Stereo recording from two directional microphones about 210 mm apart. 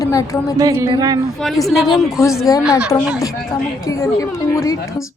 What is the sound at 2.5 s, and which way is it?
Speech, 20° left (ahead or behind).